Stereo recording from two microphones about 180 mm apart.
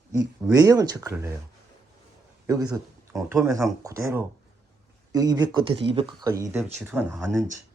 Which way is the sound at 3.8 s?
15° right (ahead or behind).